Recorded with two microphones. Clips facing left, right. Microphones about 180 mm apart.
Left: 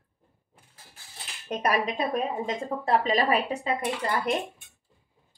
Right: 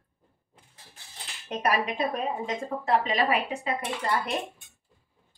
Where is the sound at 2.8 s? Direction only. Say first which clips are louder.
Left 1 dB; 40° left (ahead or behind).